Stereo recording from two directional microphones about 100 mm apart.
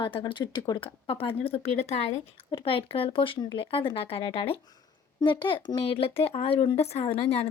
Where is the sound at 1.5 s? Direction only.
85° left; by 4.5 s 70° left (ahead or behind).